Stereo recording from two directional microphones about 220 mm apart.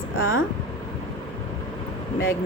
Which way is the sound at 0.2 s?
65° left (ahead or behind).